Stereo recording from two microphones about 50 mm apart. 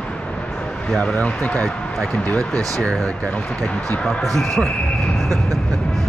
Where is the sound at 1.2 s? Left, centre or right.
Left.